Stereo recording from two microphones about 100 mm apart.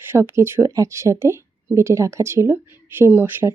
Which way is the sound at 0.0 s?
25° right (ahead or behind).